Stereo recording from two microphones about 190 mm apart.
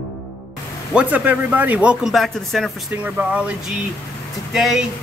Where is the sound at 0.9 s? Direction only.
10° right (ahead or behind).